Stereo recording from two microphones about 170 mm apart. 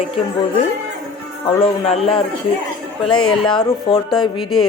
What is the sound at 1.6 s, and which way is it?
Speech, 35° left (ahead or behind).